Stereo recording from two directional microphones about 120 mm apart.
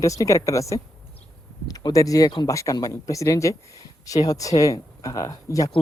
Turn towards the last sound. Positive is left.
turn(degrees=30)  # may be behind; listen again after turning